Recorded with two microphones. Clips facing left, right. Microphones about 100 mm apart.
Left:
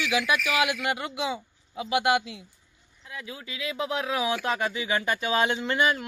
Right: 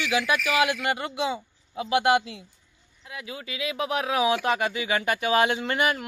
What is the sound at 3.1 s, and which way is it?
Speech, 15° right (ahead or behind).